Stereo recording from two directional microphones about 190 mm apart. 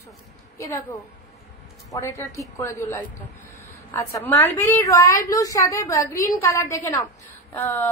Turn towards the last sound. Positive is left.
turn(degrees=10)  # may be behind; listen again after turning